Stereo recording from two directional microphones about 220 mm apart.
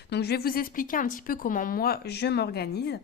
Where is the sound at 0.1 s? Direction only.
50° left (ahead or behind).